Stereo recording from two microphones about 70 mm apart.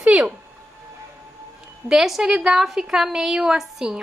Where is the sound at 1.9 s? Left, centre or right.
Centre.